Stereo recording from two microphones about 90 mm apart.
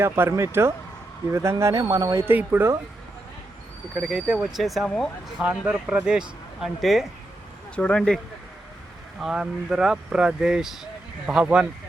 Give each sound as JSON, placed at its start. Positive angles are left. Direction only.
{"t": 0.0, "sound": "speech", "side_deg": -30}
{"t": 2.2, "sound": "speech", "side_deg": -20}
{"t": 3.9, "sound": "speech", "side_deg": -5}
{"t": 5.4, "sound": "speech", "side_deg": -10}
{"t": 7.8, "sound": "speech", "side_deg": 10}
{"t": 9.2, "sound": "speech", "side_deg": -5}